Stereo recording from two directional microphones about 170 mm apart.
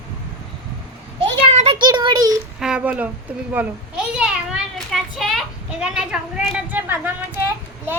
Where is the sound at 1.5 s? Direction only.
40° right (ahead or behind).